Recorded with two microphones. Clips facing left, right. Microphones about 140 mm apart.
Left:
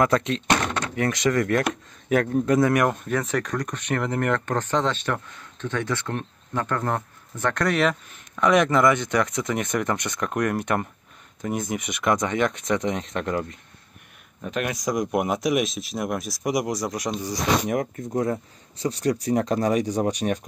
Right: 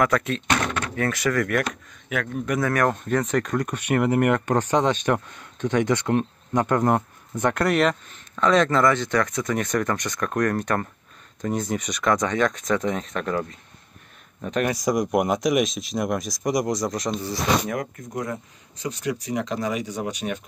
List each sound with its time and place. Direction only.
0.0 s speech: 20° left (ahead or behind)
2.0 s a man's voice: 40° left (ahead or behind)
2.9 s speech: centre (ahead or behind); by 7.6 s 15° right (ahead or behind)
7.6 s speech: centre (ahead or behind)
8.4 s speech: 15° left (ahead or behind)
14.4 s a man's voice: centre (ahead or behind); by 20.3 s 40° left (ahead or behind)